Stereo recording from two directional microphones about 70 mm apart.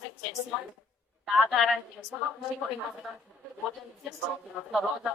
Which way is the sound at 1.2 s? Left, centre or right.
Centre.